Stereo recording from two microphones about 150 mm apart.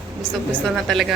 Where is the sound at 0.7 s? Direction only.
Centre (ahead or behind).